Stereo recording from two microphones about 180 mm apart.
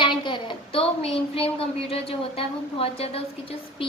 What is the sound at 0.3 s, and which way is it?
Speech, 25° left (ahead or behind).